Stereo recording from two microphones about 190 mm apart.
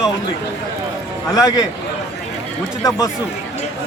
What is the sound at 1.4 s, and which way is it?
Speech, 20° left (ahead or behind).